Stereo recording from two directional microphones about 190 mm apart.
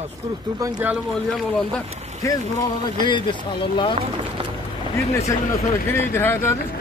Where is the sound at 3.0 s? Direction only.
25° left (ahead or behind).